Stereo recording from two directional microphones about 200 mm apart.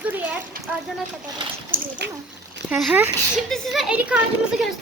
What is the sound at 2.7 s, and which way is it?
Speech, 5° right (ahead or behind).